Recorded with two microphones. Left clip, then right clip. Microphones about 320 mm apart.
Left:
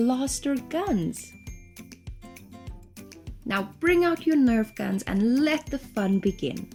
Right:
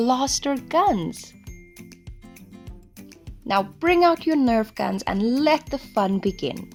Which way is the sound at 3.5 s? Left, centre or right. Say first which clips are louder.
Right 4 dB; centre.